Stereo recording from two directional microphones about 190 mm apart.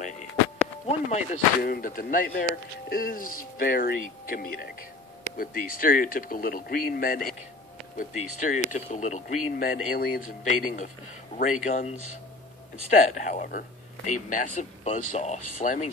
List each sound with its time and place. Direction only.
0.8 s a man's voice: 40° left (ahead or behind)
11.6 s speech: 40° left (ahead or behind)
12.9 s a man's voice: 40° left (ahead or behind)